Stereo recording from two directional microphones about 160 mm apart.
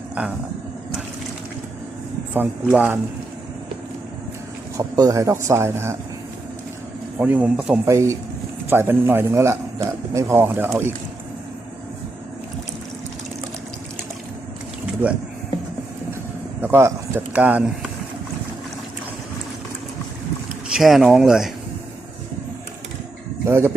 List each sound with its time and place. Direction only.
2.3 s a man's voice: 10° right (ahead or behind)
4.8 s a man's voice: 20° right (ahead or behind)
7.2 s a man's voice: 10° right (ahead or behind)
7.9 s a man's voice: 20° right (ahead or behind)
16.6 s speech: 15° right (ahead or behind)
20.7 s speech: centre (ahead or behind)
23.5 s a man's voice: 15° right (ahead or behind)